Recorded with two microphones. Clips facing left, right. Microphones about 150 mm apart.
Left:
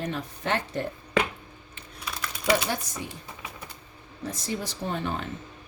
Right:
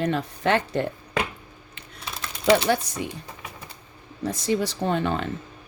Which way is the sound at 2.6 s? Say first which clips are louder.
Right 8 dB; 70° right (ahead or behind).